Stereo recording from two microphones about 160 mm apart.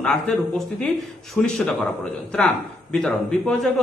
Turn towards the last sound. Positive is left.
turn(degrees=5)  # may be behind; listen again after turning